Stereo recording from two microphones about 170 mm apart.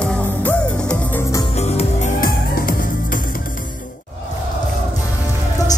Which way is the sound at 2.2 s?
60° left (ahead or behind).